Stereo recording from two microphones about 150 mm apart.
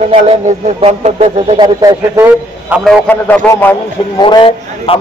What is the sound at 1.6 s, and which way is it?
Speech, 25° right (ahead or behind).